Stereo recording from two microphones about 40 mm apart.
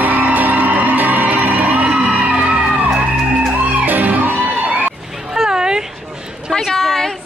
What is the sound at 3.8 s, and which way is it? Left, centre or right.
Music, right.